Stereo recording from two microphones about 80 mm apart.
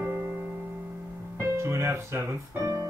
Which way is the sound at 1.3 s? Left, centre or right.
Right.